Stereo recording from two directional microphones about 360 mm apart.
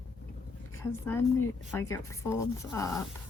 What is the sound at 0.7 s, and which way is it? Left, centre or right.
A woman's voice, centre.